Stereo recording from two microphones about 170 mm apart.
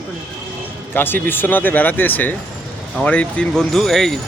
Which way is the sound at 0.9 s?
10° left (ahead or behind).